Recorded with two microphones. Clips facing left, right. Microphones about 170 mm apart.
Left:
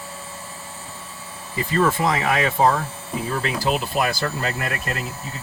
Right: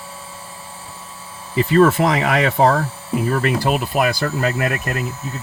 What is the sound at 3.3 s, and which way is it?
Speech, 55° right (ahead or behind).